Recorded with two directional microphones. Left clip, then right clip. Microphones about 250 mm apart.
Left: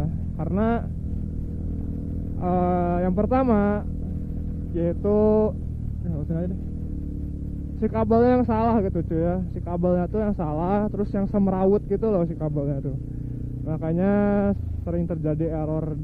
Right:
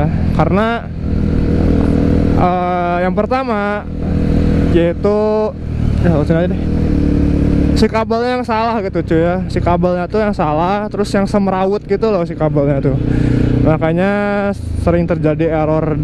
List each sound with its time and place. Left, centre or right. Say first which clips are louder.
0.0 s vehicle: right 18 dB; centre
2.3 s speech: right 7 dB; centre
4.7 s vehicle: right 8 dB; centre
6.0 s speech: right 18 dB; centre
7.8 s speech: right 3 dB; centre